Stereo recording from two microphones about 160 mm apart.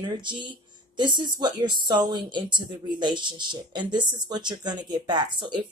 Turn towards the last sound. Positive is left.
turn(degrees=-30)  # may be behind; listen again after turning